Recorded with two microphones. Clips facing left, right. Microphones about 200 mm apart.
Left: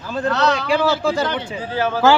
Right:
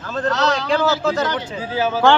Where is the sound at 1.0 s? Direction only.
10° left (ahead or behind).